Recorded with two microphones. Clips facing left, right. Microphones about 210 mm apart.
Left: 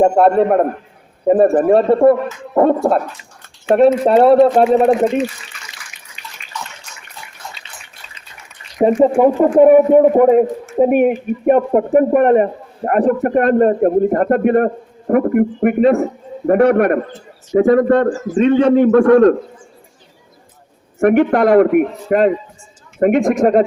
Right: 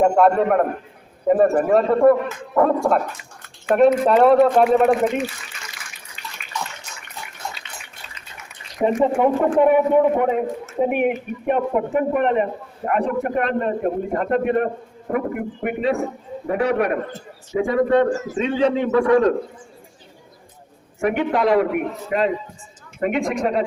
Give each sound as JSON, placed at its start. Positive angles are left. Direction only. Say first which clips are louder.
{"t": 0.0, "sound": "speech", "louder": "left 4 dB", "side_deg": 30}
{"t": 8.8, "sound": "speech", "louder": "left 6 dB", "side_deg": 35}
{"t": 21.0, "sound": "speech", "louder": "left 8 dB", "side_deg": 55}